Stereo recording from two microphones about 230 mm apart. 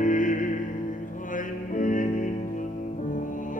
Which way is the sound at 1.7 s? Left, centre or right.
Left.